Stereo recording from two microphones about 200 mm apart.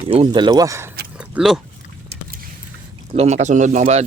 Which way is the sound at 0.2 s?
20° right (ahead or behind).